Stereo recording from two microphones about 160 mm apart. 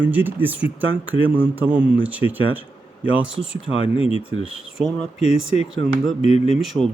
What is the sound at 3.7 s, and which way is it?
Speech, 35° left (ahead or behind).